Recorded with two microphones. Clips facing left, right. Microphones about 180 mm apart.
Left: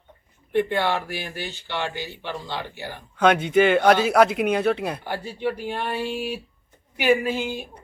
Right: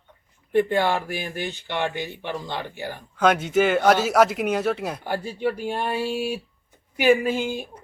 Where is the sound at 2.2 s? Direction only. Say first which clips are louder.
Right 1 dB; 15° right (ahead or behind).